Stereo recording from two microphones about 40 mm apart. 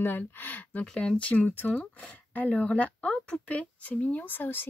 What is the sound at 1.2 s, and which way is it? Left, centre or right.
Speech, left.